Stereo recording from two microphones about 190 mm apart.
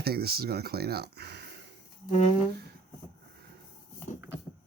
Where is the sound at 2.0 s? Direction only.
35° left (ahead or behind).